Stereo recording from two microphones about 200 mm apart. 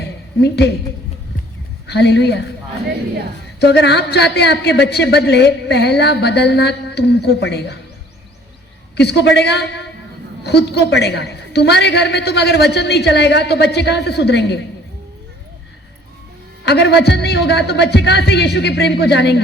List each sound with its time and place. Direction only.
0.4 s a woman's voice: 55° left (ahead or behind)
1.9 s a woman's voice: 55° left (ahead or behind)
3.6 s a woman's voice: 55° left (ahead or behind)
9.0 s a woman's voice: 55° left (ahead or behind)
16.6 s a woman's voice: 60° left (ahead or behind)